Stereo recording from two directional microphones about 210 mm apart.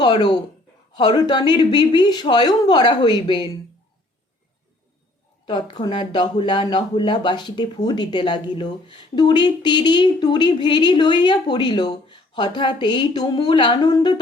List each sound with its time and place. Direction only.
0.0 s speech: 20° left (ahead or behind)
5.5 s speech: 20° left (ahead or behind)